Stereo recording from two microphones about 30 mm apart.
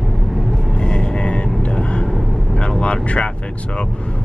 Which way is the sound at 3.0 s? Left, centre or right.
Left.